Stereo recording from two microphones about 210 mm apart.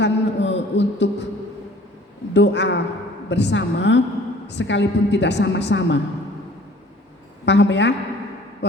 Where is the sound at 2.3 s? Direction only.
55° left (ahead or behind).